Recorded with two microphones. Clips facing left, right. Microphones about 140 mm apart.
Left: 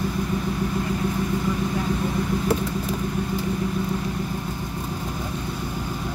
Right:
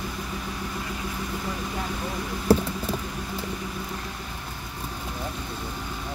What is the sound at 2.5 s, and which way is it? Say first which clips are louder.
Vehicle: right 6 dB; 35° right (ahead or behind).